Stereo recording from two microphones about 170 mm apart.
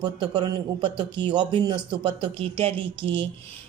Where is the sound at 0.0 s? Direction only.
25° right (ahead or behind).